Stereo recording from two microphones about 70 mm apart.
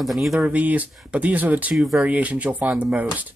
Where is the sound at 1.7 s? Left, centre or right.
Centre.